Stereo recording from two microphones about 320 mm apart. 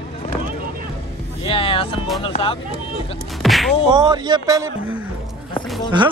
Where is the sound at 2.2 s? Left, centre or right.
Centre.